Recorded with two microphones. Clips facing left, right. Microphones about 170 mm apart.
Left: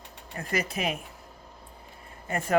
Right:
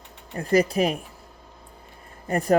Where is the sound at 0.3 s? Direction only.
35° right (ahead or behind).